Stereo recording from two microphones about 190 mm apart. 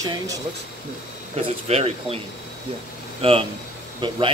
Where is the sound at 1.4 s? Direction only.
35° right (ahead or behind).